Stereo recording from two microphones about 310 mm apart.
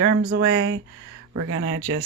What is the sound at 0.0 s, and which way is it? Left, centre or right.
Speech, right.